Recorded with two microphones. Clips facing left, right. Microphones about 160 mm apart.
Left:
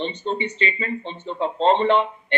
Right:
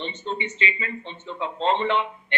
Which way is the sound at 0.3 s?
35° left (ahead or behind).